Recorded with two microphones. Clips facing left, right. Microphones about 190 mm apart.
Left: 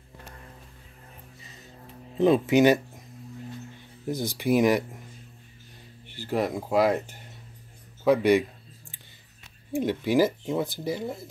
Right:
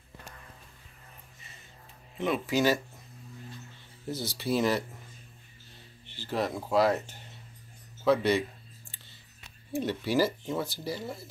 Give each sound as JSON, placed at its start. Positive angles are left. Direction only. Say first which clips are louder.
{"t": 2.1, "sound": "speech", "louder": "left 9 dB", "side_deg": 30}
{"t": 4.1, "sound": "speech", "louder": "left 6 dB", "side_deg": 15}
{"t": 6.0, "sound": "speech", "louder": "left 4 dB", "side_deg": 10}
{"t": 9.7, "sound": "speech", "louder": "left 5 dB", "side_deg": 15}